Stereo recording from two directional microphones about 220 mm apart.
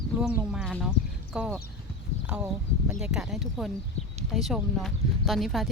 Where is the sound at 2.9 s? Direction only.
5° right (ahead or behind).